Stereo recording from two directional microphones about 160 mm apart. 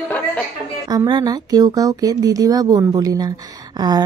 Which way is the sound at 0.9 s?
25° right (ahead or behind).